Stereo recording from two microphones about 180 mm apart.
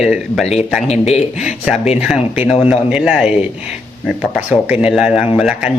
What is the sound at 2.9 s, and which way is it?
Speech, 5° right (ahead or behind).